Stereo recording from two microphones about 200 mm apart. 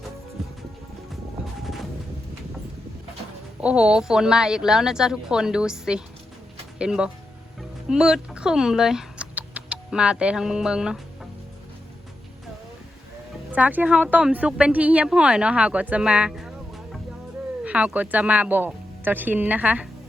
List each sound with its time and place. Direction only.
3.6 s a woman's voice: 5° right (ahead or behind)
13.5 s a woman's voice: 10° right (ahead or behind)